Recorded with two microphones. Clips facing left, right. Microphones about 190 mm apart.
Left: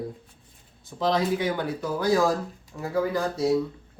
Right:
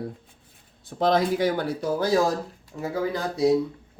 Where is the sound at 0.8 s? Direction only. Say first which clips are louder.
Right 3 dB; 55° right (ahead or behind).